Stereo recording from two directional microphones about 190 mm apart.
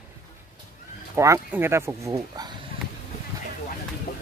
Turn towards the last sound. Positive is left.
turn(degrees=55)  # may be behind; listen again after turning